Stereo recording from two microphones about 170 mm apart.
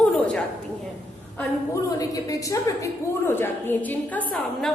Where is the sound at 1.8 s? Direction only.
20° left (ahead or behind); by 4.7 s 5° left (ahead or behind).